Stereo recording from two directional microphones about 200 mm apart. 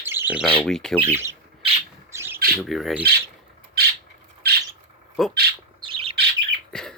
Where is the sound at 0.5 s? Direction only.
5° left (ahead or behind).